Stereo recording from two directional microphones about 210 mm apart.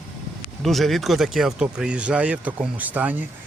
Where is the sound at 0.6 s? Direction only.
Centre (ahead or behind).